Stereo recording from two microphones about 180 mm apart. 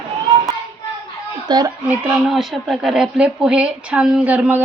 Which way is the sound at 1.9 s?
5° right (ahead or behind).